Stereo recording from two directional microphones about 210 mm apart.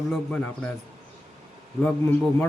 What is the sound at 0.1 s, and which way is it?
Speech, 5° left (ahead or behind).